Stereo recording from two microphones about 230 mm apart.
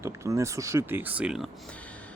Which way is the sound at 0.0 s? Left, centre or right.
Centre.